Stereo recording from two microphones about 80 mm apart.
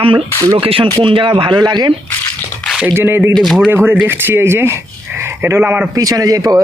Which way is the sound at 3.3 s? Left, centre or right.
Centre.